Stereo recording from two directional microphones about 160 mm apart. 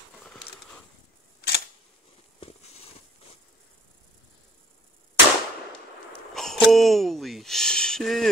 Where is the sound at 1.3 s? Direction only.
90° left.